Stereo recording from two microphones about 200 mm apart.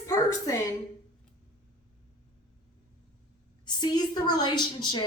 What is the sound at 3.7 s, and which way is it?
A woman's voice, 20° left (ahead or behind).